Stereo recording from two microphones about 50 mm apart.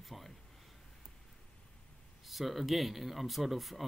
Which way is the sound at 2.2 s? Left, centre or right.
Centre.